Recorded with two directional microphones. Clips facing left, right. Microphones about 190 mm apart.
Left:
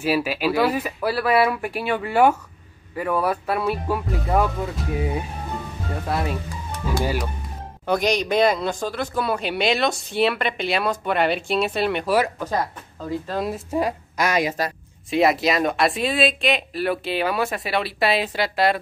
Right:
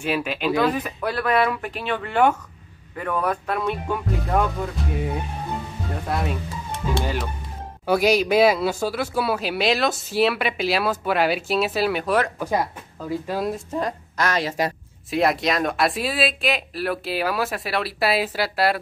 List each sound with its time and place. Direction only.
0.0 s a man's voice: 5° left (ahead or behind)
6.0 s a man's voice: centre (ahead or behind)
6.7 s music: 25° right (ahead or behind)
7.8 s a man's voice: 5° right (ahead or behind)
13.3 s a man's voice: centre (ahead or behind)
13.7 s speech: 10° left (ahead or behind)
15.0 s a man's voice: centre (ahead or behind)